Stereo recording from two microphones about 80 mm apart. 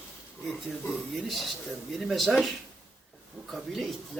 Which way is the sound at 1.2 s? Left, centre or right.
Centre.